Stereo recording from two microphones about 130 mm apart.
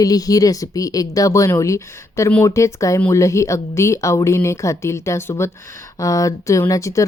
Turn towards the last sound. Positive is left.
turn(degrees=25)  # may be behind; listen again after turning